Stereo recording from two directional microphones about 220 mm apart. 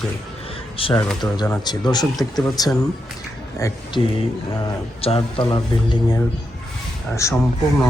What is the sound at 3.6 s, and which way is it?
Speech, 15° left (ahead or behind).